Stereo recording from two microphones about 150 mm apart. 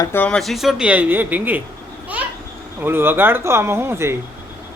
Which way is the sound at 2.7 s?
15° right (ahead or behind).